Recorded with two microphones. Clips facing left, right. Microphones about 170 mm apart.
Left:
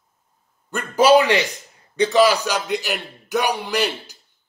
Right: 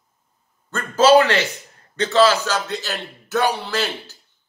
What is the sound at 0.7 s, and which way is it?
Speech, 15° left (ahead or behind).